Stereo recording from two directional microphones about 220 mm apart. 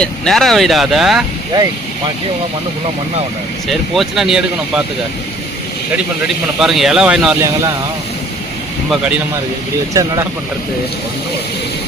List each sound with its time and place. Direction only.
0.0 s speech: centre (ahead or behind)
3.7 s speech: centre (ahead or behind)
6.2 s speech: centre (ahead or behind)
9.9 s speech: 15° right (ahead or behind)